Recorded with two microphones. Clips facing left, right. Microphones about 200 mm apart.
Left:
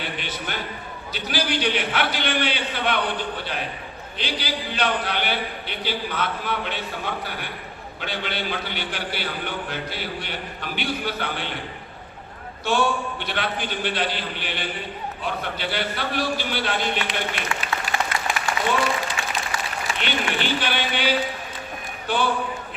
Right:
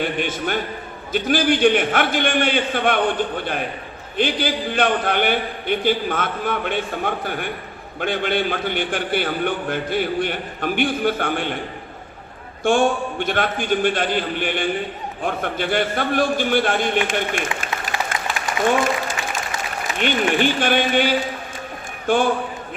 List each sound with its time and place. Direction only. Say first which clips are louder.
0.0 s a man's voice: right 8 dB; 50° right (ahead or behind)
12.6 s a man's voice: right 5 dB; 50° right (ahead or behind)
18.6 s applause: right 6 dB; 50° right (ahead or behind)
20.0 s a man's voice: right 9 dB; 50° right (ahead or behind)